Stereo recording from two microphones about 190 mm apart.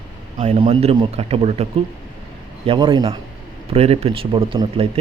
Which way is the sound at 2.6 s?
25° right (ahead or behind).